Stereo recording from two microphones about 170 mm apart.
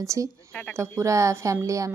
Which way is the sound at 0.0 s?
20° right (ahead or behind).